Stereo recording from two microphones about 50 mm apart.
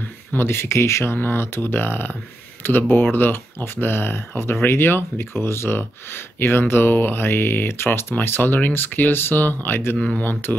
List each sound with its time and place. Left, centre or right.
0.3 s speech: left
1.2 s speech: left
9.9 s speech: centre
10.2 s music: left